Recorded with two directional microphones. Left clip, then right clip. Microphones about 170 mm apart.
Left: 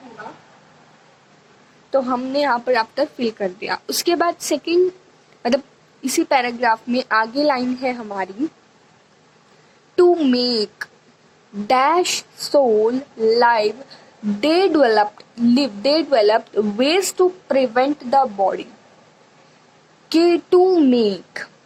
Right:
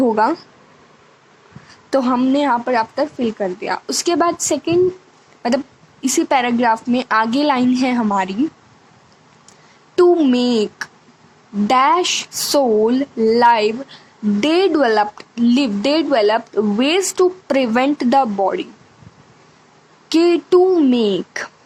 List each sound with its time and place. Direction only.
2.0 s speech: 30° right (ahead or behind)
9.9 s speech: 25° right (ahead or behind)
17.6 s speech: 15° right (ahead or behind)
17.9 s speech: 35° right (ahead or behind)
20.1 s speech: 30° right (ahead or behind)